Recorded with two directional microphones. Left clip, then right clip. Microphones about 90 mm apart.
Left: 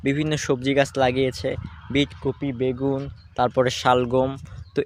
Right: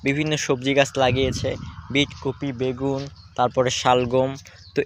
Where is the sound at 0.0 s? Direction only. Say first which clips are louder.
Right 1 dB; 55° left (ahead or behind).